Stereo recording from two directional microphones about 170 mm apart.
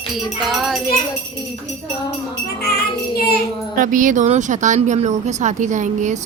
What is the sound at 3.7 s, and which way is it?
Speech, 50° right (ahead or behind).